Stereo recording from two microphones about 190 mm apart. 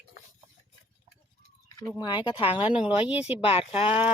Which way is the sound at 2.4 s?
5° right (ahead or behind).